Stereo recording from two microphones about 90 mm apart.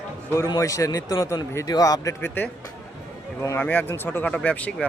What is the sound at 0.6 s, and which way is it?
Speech, 35° left (ahead or behind).